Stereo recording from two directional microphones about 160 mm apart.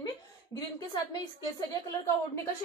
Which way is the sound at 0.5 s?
25° left (ahead or behind).